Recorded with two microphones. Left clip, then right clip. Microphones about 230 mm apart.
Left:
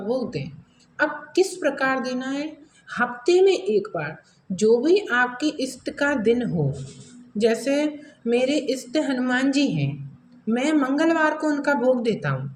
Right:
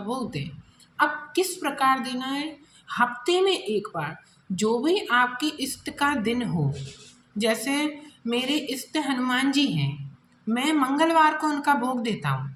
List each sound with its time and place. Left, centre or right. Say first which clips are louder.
0.1 s a woman's voice: left 5 dB; right